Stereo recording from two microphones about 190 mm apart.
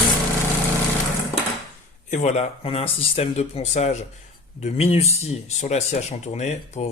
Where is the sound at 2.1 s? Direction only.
35° left (ahead or behind).